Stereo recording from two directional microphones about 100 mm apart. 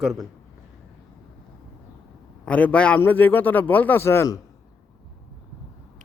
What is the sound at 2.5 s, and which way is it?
A man's voice, 15° left (ahead or behind).